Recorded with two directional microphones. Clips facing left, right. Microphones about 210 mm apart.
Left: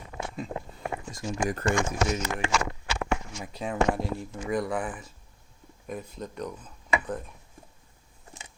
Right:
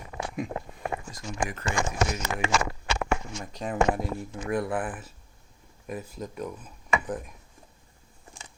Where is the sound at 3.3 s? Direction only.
5° left (ahead or behind).